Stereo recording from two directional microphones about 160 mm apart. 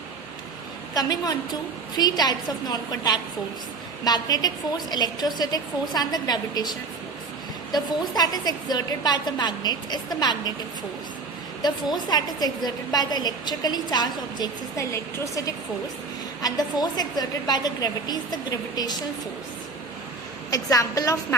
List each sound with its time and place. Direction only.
0.9 s a woman's voice: 25° left (ahead or behind)
7.7 s a woman's voice: 25° left (ahead or behind)
11.6 s a woman's voice: 25° left (ahead or behind)
20.5 s a woman's voice: 20° left (ahead or behind)